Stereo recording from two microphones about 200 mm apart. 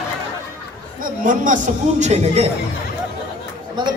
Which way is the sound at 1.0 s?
40° right (ahead or behind).